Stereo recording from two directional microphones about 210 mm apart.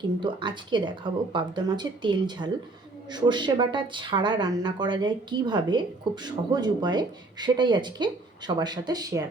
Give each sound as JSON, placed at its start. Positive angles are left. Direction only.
{"t": 0.2, "sound": "speech", "side_deg": -20}